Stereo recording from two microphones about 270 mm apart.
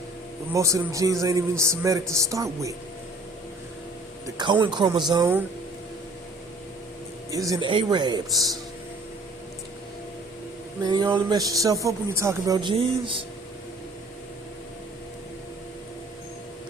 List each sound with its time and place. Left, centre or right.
0.5 s speech: centre
4.4 s speech: centre
7.3 s speech: centre
10.8 s speech: centre